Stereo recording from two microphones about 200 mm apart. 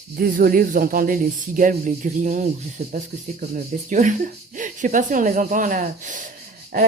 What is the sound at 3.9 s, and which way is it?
Speech, 40° right (ahead or behind).